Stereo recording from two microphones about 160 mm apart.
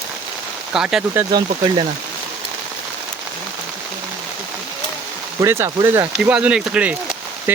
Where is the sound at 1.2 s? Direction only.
25° right (ahead or behind).